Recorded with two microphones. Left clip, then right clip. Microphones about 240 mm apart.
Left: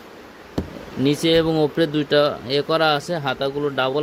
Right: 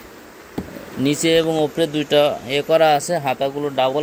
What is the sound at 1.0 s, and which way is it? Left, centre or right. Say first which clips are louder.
A man's voice: right 1 dB; centre.